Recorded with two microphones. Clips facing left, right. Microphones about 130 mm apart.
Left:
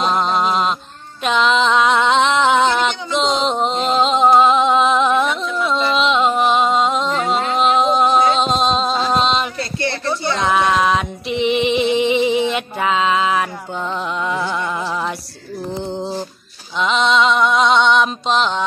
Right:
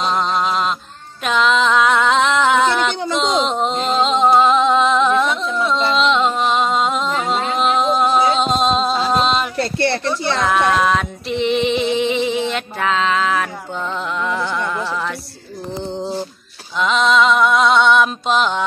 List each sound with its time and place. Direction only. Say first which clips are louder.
0.1 s a sound: left 1 dB; 5° left (ahead or behind)
1.2 s music: even; centre (ahead or behind)
9.6 s a sound: right 4 dB; 60° right (ahead or behind)
10.4 s female singing: even; centre (ahead or behind)
14.2 s music: right 1 dB; 10° left (ahead or behind)
16.7 s music: right 1 dB; centre (ahead or behind)